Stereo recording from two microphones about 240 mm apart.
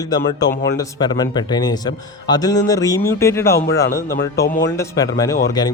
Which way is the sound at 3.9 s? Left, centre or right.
Left.